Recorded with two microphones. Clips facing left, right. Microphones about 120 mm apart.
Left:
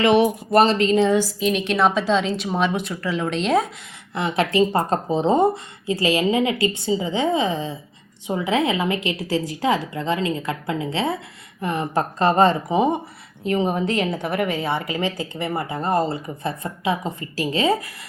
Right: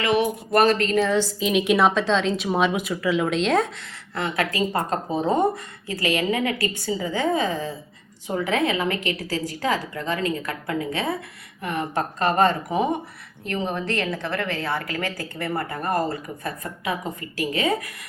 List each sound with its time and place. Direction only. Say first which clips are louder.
0.0 s a woman's voice: left 5 dB; 25° left (ahead or behind)
1.4 s a woman's voice: even; 5° right (ahead or behind)
4.1 s a woman's voice: left 4 dB; 20° left (ahead or behind)